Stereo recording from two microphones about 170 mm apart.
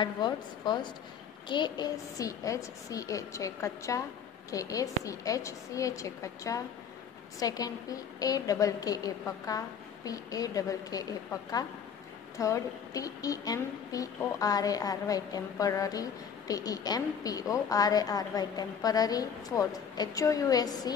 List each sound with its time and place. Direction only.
0.0 s a woman's voice: 25° left (ahead or behind)
12.4 s a woman's voice: 20° left (ahead or behind)